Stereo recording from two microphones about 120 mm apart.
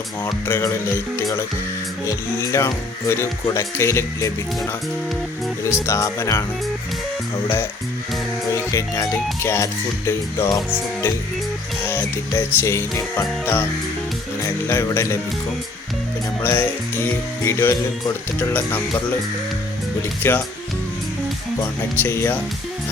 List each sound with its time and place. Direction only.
0.4 s music: 20° left (ahead or behind)
7.4 s music: 20° left (ahead or behind)
11.9 s music: 20° left (ahead or behind)
16.4 s music: 20° left (ahead or behind)
18.3 s speech: 15° left (ahead or behind)
20.0 s speech: 20° left (ahead or behind)
21.9 s music: 20° left (ahead or behind)